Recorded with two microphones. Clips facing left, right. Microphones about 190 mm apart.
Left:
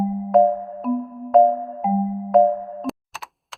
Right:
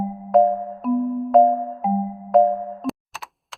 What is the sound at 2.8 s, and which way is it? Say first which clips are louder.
Computer keyboard: right 1 dB; centre (ahead or behind).